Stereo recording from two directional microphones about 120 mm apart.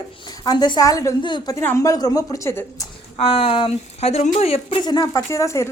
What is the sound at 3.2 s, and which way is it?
A woman's voice, 50° left (ahead or behind).